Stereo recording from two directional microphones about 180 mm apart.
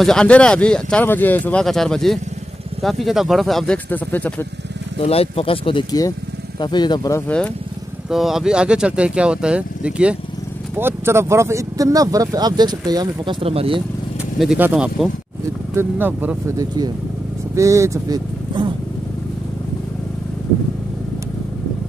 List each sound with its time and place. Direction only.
0.0 s speech: 5° left (ahead or behind)
4.9 s speech: 35° left (ahead or behind); by 13.8 s 30° right (ahead or behind)
14.4 s speech: 5° right (ahead or behind); by 18.7 s 25° right (ahead or behind)